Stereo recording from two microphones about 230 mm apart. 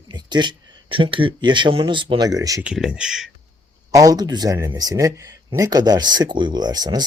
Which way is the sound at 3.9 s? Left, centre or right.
Centre.